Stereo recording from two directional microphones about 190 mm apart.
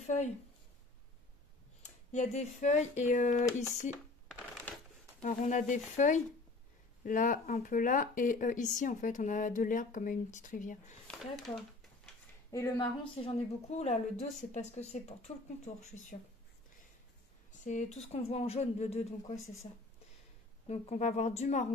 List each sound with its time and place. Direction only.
0.0 s speech: 35° left (ahead or behind)
1.8 s speech: 35° left (ahead or behind)
4.3 s a sound: centre (ahead or behind)
5.2 s speech: 40° left (ahead or behind)
11.1 s speech: centre (ahead or behind)
12.4 s a woman's voice: 20° left (ahead or behind); by 16.2 s 40° left (ahead or behind)
17.6 s speech: 40° left (ahead or behind)